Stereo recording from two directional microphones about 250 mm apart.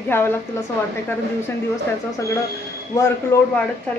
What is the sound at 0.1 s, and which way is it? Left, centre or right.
Speech, centre.